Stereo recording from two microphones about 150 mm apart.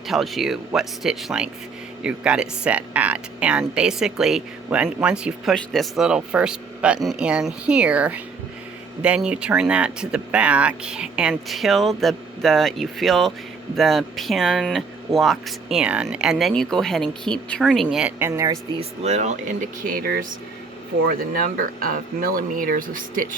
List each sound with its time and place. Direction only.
0.1 s speech: centre (ahead or behind)
18.3 s speech: 25° right (ahead or behind)
18.8 s speech: 45° right (ahead or behind); by 20.2 s 80° right
21.8 s speech: 70° right (ahead or behind)